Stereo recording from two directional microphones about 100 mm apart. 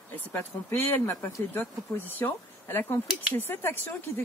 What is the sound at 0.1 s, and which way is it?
Speech, 20° left (ahead or behind).